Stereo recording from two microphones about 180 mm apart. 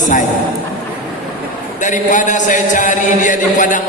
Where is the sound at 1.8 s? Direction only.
45° left (ahead or behind).